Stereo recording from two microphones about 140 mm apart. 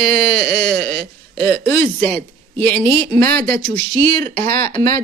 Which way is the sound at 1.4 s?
90° right.